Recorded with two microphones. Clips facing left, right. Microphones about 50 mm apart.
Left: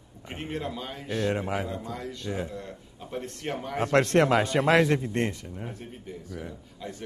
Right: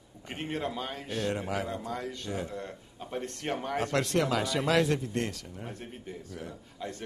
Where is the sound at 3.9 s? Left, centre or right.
Left.